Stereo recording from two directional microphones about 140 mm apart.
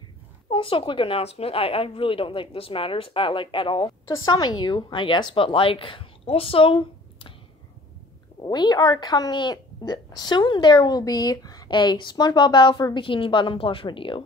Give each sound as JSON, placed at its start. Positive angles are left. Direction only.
{"t": 0.5, "sound": "a woman's voice", "side_deg": 40}
{"t": 8.4, "sound": "a woman's voice", "side_deg": 30}